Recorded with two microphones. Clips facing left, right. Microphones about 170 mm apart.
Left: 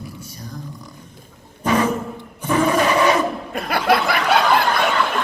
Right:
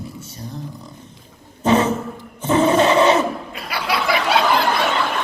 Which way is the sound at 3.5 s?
50° left (ahead or behind).